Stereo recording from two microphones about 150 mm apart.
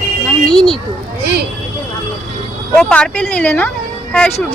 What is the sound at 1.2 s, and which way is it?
Speech, 90° right.